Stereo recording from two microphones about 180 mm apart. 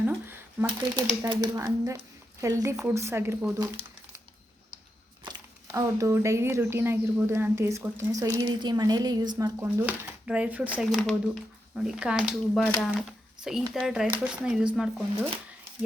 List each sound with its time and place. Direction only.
0.0 s shuffling cards: 15° right (ahead or behind)
1.2 s speech: 20° right (ahead or behind)
5.7 s speech: 15° right (ahead or behind)
12.5 s speech: 10° left (ahead or behind)
13.1 s a sound: 5° right (ahead or behind)
13.7 s speech: centre (ahead or behind)